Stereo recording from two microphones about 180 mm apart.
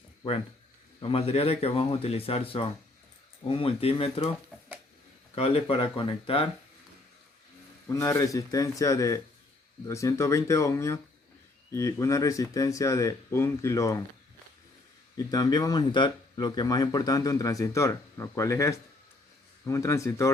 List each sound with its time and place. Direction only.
0.9 s speech: 30° left (ahead or behind)
5.3 s speech: 35° left (ahead or behind)
7.9 s speech: 20° left (ahead or behind)
15.3 s speech: 20° left (ahead or behind)